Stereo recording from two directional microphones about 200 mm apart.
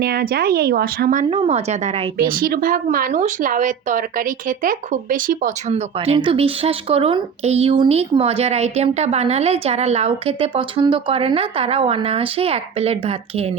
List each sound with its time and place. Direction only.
0.0 s speech: 50° right (ahead or behind)
1.3 s speech: 30° right (ahead or behind)
2.1 s speech: 45° right (ahead or behind); by 13.1 s 30° right (ahead or behind)